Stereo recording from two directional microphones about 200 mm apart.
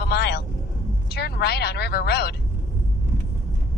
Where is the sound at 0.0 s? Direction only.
55° left (ahead or behind).